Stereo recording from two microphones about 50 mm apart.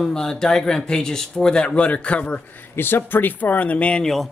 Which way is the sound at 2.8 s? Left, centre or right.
Left.